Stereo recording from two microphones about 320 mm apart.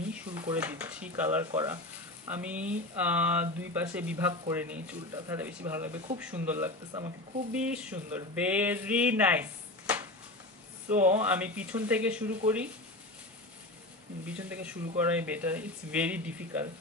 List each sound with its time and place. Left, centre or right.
0.3 s speech: centre
10.9 s speech: right
11.1 s speech: centre
14.2 s speech: centre